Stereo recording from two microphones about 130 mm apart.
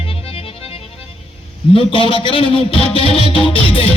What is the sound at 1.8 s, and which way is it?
Speech, 40° left (ahead or behind).